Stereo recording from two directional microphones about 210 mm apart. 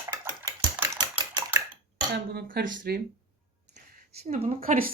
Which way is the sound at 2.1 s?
50° right (ahead or behind).